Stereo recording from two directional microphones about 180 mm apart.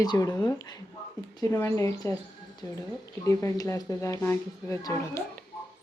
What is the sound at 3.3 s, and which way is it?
Speech, 15° left (ahead or behind).